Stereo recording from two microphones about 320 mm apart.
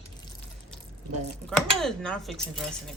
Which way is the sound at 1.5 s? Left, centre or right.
Centre.